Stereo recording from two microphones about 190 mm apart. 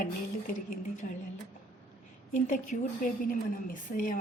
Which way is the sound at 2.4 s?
40° left (ahead or behind).